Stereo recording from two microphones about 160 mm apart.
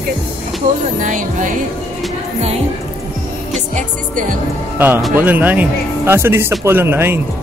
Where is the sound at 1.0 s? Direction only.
50° right (ahead or behind).